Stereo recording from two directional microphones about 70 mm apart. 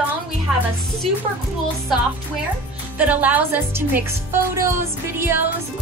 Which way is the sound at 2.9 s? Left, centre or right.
Right.